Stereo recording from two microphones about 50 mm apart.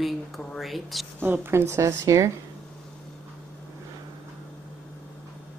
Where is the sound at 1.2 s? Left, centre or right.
Right.